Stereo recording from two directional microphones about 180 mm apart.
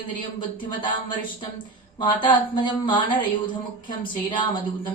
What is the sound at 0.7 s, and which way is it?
A woman's voice, 25° left (ahead or behind).